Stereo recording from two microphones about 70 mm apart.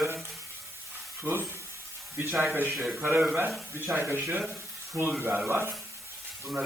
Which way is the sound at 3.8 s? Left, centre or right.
Right.